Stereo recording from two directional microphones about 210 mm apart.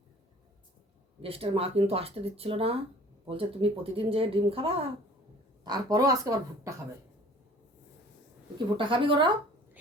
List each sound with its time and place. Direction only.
1.2 s speech: 25° right (ahead or behind)
8.5 s speech: 25° right (ahead or behind)